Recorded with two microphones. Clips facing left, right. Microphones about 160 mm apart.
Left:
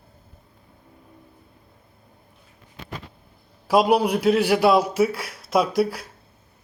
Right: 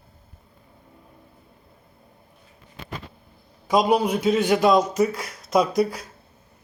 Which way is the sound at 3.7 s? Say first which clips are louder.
Left 1 dB; 5° left (ahead or behind).